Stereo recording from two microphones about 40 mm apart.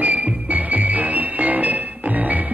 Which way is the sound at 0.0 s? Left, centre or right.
Right.